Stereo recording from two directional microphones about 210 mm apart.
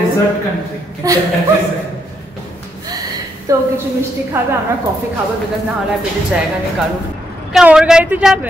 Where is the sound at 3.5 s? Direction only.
15° right (ahead or behind).